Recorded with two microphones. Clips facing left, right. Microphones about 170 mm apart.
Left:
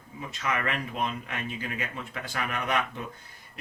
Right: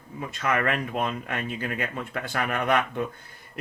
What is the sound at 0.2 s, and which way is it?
Speech, 55° right (ahead or behind).